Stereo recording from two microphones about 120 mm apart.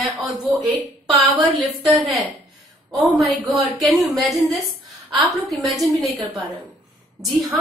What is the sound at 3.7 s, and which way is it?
A woman's voice, centre (ahead or behind).